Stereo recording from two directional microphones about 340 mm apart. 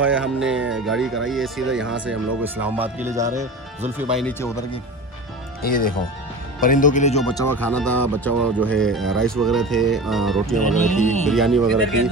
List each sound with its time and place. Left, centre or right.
0.0 s speech: centre
4.1 s speech: centre
6.6 s speech: left; by 10.6 s centre
10.7 s speech: left
11.2 s speech: centre